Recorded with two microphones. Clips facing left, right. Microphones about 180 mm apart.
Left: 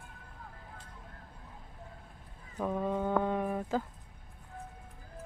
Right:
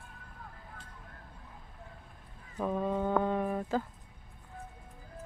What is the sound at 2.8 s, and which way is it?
Brass instrument, 5° right (ahead or behind).